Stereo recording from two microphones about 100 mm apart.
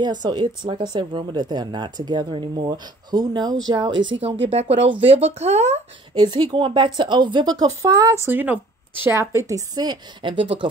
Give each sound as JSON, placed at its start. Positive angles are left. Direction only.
{"t": 0.0, "sound": "speech", "side_deg": -45}
{"t": 4.2, "sound": "speech", "side_deg": -90}
{"t": 6.1, "sound": "speech", "side_deg": -50}
{"t": 8.3, "sound": "speech", "side_deg": -20}
{"t": 9.5, "sound": "speech", "side_deg": -40}